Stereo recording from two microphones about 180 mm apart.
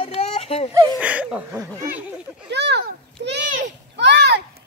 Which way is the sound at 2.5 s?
70° right (ahead or behind).